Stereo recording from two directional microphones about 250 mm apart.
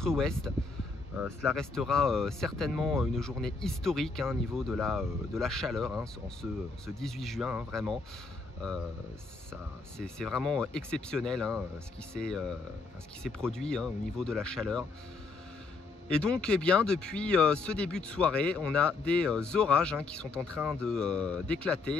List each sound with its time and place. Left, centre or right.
0.0 s speech: centre
16.1 s speech: centre